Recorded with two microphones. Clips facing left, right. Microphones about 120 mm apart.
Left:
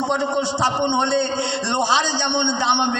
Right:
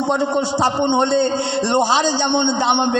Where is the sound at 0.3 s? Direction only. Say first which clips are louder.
Right 3 dB; 35° right (ahead or behind).